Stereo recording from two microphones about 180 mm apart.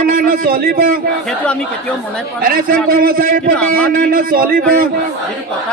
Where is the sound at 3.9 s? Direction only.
50° right (ahead or behind).